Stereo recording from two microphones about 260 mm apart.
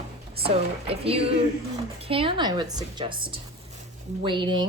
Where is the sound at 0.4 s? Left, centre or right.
Right.